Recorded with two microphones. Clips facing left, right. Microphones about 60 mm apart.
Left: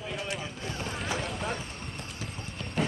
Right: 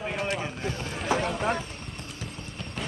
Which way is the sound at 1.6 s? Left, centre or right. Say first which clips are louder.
Right 2 dB; centre.